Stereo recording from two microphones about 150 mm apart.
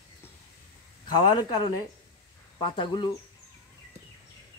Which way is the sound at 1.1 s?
25° left (ahead or behind).